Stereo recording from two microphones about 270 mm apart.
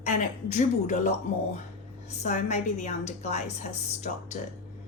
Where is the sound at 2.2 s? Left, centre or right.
Left.